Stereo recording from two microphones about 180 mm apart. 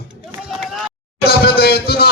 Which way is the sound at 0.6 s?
Centre (ahead or behind).